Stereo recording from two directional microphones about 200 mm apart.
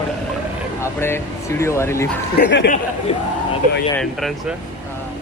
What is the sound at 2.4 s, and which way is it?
Speech, 55° left (ahead or behind).